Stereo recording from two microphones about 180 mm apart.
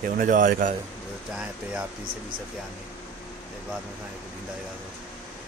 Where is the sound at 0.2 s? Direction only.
50° right (ahead or behind).